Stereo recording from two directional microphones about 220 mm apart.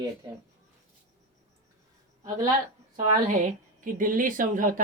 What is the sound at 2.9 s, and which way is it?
A woman's voice, 35° right (ahead or behind).